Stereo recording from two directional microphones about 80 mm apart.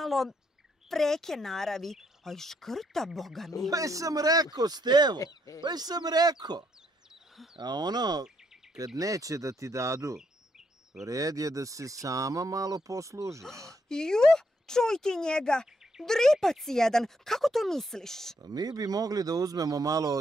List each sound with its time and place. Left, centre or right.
0.0 s speech: centre
3.7 s speech: right
5.2 s speech: left
5.6 s speech: right
13.8 s speech: centre
18.4 s speech: right